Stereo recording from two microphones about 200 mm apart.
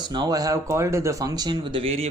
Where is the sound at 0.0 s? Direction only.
20° right (ahead or behind).